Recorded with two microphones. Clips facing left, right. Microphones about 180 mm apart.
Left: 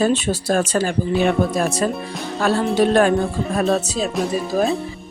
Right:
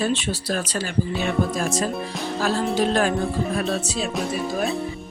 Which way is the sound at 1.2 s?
60° left (ahead or behind).